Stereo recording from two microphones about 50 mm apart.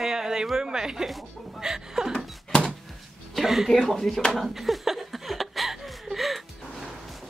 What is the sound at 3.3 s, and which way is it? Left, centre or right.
Speech, centre.